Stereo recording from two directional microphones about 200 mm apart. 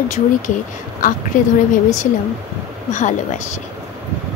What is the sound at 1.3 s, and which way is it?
Speech, 40° left (ahead or behind).